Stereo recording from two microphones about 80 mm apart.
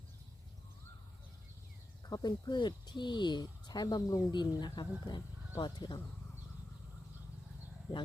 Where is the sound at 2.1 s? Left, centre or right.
Left.